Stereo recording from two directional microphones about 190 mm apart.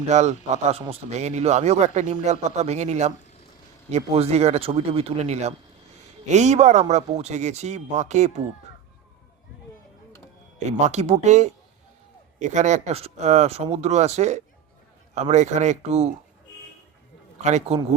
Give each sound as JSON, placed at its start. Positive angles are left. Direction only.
{"t": 0.1, "sound": "a man's voice", "side_deg": -35}
{"t": 10.7, "sound": "a man's voice", "side_deg": -35}
{"t": 17.4, "sound": "a man's voice", "side_deg": -35}